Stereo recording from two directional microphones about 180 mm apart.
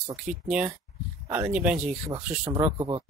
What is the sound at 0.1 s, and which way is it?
Speech, 5° right (ahead or behind).